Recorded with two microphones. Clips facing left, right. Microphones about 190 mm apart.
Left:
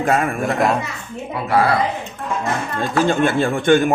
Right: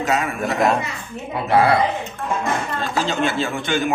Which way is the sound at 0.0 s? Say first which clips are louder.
Left 3 dB; 50° left (ahead or behind).